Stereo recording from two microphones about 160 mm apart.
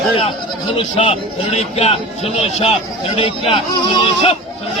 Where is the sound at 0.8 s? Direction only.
35° left (ahead or behind).